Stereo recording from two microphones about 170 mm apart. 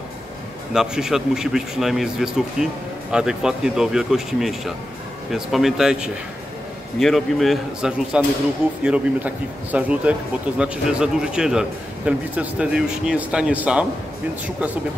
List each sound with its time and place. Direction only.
0.7 s a man's voice: 5° right (ahead or behind)